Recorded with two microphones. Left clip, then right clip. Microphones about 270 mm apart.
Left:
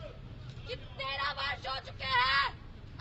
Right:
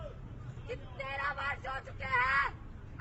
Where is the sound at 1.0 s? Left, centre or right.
Centre.